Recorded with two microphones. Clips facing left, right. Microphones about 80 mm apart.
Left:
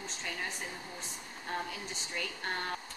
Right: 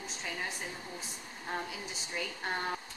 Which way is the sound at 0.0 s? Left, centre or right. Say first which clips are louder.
Even; centre.